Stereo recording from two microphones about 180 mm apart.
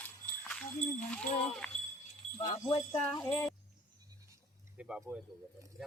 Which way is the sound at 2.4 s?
45° left (ahead or behind).